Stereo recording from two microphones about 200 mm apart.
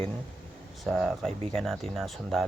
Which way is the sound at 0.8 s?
Centre (ahead or behind).